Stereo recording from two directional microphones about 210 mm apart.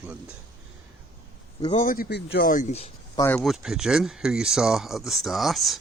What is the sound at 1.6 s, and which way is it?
Speech, 35° left (ahead or behind).